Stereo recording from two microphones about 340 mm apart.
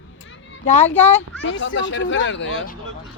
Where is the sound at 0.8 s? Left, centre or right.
Centre.